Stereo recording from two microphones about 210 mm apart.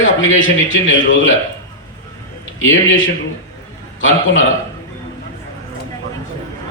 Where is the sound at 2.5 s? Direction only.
65° left (ahead or behind).